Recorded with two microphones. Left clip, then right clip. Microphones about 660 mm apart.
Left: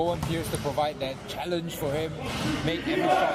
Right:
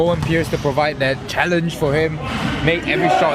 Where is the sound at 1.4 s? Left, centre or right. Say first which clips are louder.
Right 15 dB; right.